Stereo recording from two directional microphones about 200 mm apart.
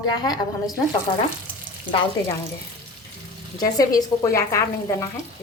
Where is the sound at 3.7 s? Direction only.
15° left (ahead or behind).